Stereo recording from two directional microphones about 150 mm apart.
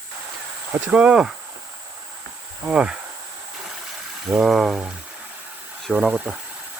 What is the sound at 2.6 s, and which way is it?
Speech, 5° right (ahead or behind).